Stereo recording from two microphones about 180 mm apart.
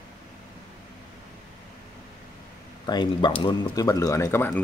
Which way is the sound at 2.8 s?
25° left (ahead or behind).